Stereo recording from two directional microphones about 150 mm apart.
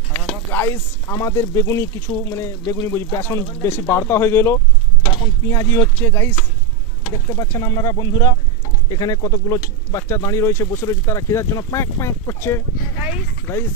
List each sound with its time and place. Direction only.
0.1 s speech: 15° left (ahead or behind)
7.3 s speech: 20° left (ahead or behind)